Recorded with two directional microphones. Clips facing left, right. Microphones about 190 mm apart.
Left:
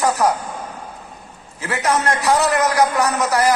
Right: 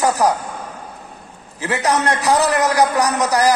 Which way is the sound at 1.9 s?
20° right (ahead or behind).